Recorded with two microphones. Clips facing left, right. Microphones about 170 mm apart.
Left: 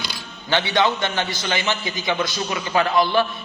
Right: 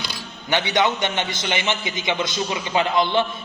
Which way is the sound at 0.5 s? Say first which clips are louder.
Left 1 dB; 20° right (ahead or behind).